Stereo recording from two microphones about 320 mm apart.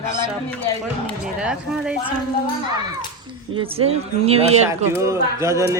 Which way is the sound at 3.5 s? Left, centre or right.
Centre.